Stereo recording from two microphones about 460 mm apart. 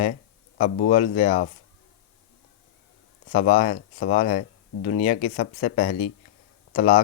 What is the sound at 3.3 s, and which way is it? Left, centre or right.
Speech, centre.